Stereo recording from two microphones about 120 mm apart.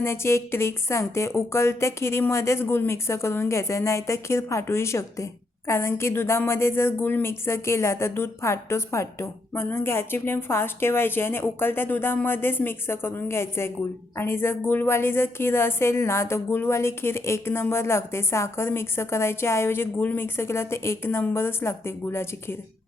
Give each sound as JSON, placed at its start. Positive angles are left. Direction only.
{"t": 0.0, "sound": "speech", "side_deg": 20}